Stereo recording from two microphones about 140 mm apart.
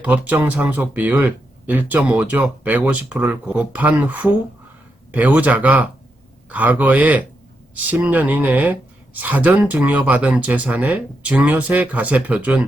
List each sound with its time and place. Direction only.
0.0 s speech: 10° right (ahead or behind)